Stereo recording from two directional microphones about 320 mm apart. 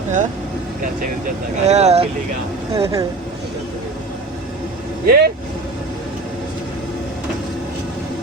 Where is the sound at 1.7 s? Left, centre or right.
Centre.